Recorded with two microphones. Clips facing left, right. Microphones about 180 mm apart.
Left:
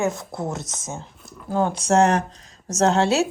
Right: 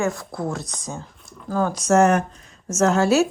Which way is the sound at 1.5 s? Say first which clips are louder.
Left 1 dB; 20° left (ahead or behind).